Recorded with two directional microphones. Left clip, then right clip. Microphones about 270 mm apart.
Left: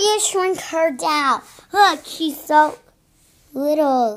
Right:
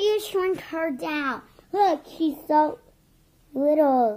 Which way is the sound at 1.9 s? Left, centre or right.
Left.